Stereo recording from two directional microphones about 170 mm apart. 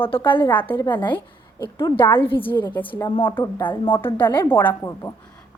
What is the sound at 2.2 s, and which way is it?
A woman's voice, 30° left (ahead or behind).